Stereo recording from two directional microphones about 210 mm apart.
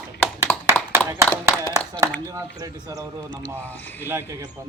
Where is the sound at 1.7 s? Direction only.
15° right (ahead or behind).